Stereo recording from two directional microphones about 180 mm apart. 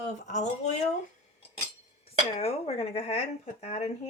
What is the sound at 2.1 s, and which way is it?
Speech, 35° left (ahead or behind).